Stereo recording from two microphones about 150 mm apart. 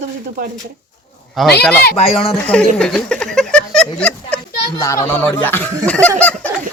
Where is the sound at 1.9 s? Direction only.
40° left (ahead or behind).